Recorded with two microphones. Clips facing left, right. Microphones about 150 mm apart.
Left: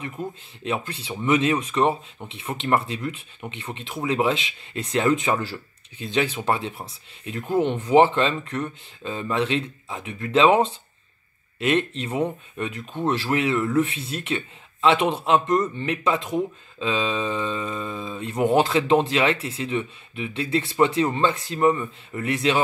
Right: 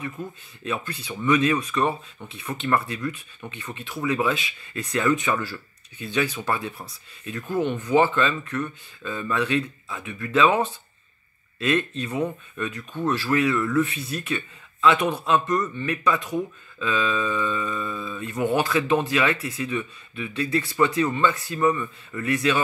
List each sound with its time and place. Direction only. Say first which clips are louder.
0.2 s speech: left 3 dB; 20° left (ahead or behind)
11.6 s speech: left 1 dB; 20° left (ahead or behind)
14.3 s speech: left 1 dB; 25° left (ahead or behind)